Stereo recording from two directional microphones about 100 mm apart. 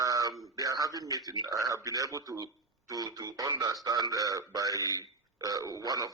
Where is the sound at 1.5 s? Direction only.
35° right (ahead or behind).